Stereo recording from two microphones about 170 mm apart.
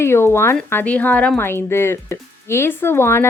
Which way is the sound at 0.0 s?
15° left (ahead or behind).